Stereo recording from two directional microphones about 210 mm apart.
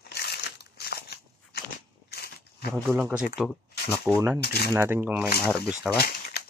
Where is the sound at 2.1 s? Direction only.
50° left (ahead or behind).